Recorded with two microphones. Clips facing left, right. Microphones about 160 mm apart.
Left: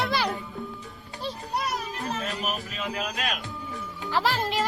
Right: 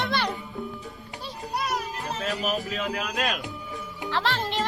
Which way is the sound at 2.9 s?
45° right (ahead or behind).